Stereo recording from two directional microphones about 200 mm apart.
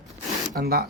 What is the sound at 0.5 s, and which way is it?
Speech, 50° right (ahead or behind).